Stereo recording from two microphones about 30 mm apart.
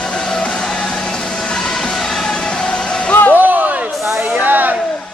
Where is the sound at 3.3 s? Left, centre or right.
Right.